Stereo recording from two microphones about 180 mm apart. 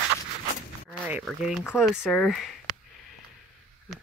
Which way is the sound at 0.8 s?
10° right (ahead or behind).